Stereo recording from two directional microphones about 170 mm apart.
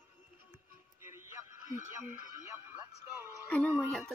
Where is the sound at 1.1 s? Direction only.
15° right (ahead or behind).